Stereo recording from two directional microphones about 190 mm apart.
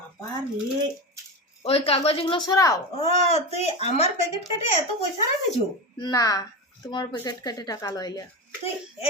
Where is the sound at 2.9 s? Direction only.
35° left (ahead or behind).